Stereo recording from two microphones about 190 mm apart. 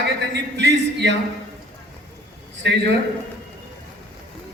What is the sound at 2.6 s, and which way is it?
Speech, 65° right (ahead or behind).